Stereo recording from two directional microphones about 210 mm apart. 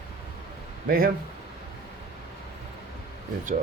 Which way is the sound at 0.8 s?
45° right (ahead or behind).